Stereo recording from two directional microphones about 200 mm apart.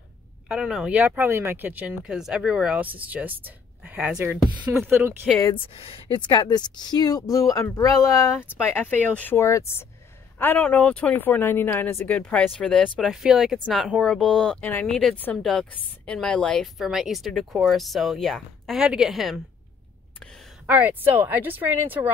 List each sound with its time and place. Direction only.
0.5 s speech: 5° right (ahead or behind)
5.4 s speech: 25° left (ahead or behind); by 19.4 s centre (ahead or behind)
20.6 s speech: 10° right (ahead or behind)